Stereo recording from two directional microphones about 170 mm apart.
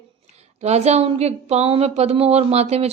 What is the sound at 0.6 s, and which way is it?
A woman's voice, 40° right (ahead or behind).